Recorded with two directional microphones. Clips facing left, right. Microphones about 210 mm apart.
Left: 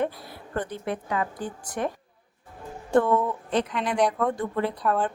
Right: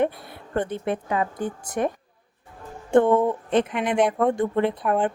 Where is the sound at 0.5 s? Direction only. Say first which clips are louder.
Right 4 dB; 25° right (ahead or behind).